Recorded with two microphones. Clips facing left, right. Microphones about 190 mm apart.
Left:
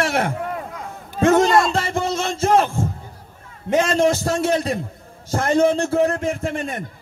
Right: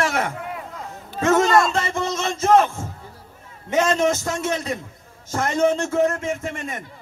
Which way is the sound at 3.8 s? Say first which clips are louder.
Left 1 dB; 30° left (ahead or behind).